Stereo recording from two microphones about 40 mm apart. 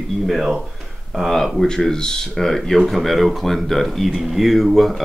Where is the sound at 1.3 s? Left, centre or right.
Centre.